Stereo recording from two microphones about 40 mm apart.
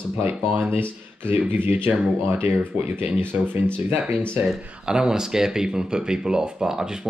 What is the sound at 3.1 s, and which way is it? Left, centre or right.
Speech, right.